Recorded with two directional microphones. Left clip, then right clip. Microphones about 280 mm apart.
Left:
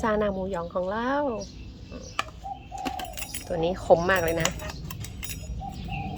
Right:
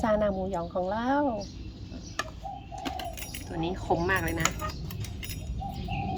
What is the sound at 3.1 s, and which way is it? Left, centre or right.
Speech, centre.